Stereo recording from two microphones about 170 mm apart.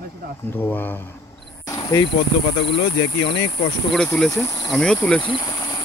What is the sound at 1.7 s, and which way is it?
Insect, 25° left (ahead or behind).